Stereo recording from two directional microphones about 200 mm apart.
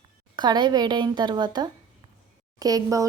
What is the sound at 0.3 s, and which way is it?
A woman's voice, 20° right (ahead or behind).